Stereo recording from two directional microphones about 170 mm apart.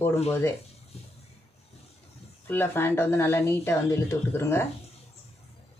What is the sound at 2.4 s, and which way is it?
Speech, 10° left (ahead or behind).